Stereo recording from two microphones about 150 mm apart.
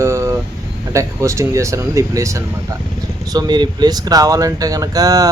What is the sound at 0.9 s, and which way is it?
Speech, 20° right (ahead or behind).